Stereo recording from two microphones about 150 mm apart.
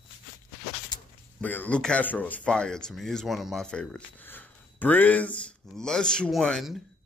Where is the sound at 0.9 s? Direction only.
30° left (ahead or behind).